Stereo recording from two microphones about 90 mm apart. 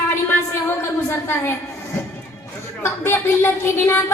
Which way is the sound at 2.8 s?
25° left (ahead or behind).